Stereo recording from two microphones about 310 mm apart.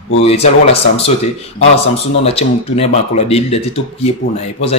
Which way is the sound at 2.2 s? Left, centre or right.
Centre.